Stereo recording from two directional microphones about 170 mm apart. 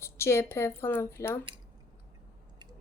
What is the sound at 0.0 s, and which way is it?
A woman's voice, 15° left (ahead or behind).